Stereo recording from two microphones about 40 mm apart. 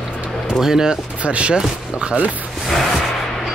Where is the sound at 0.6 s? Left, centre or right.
Centre.